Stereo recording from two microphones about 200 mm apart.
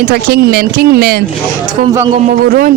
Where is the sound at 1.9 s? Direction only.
15° right (ahead or behind).